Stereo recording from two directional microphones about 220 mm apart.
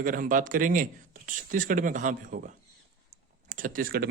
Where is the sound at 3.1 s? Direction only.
35° right (ahead or behind).